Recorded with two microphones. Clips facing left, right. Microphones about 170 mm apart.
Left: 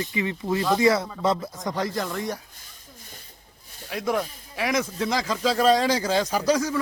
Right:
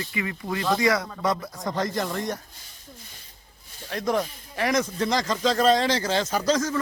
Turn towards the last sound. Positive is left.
turn(degrees=10)  # may be behind; listen again after turning